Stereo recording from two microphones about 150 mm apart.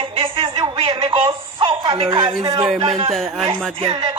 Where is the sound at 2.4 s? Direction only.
25° right (ahead or behind).